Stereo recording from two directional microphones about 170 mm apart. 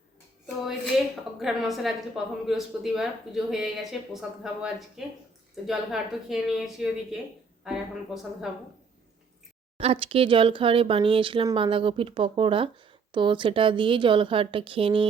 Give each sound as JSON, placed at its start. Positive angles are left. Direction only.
{"t": 1.4, "sound": "speech", "side_deg": 0}
{"t": 9.7, "sound": "speech", "side_deg": -35}